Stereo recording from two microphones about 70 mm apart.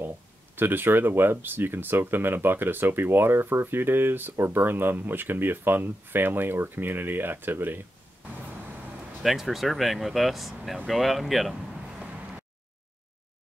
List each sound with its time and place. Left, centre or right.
0.6 s speech: right
9.2 s speech: centre
12.0 s vehicle: centre